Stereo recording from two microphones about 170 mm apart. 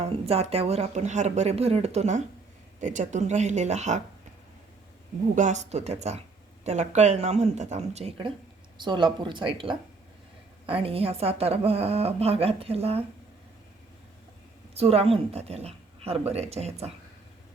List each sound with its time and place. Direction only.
0.0 s a woman's voice: 35° right (ahead or behind)
5.3 s a woman's voice: 45° right (ahead or behind)
8.8 s a woman's voice: 25° right (ahead or behind)
14.8 s a woman's voice: 35° right (ahead or behind)